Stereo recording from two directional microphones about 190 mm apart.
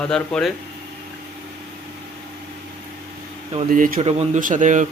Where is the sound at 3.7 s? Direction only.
45° right (ahead or behind).